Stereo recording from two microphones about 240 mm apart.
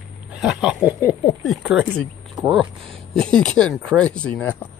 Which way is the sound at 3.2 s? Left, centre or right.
Centre.